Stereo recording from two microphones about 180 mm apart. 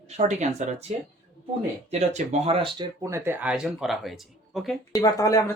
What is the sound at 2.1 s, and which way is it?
Speech, 30° right (ahead or behind).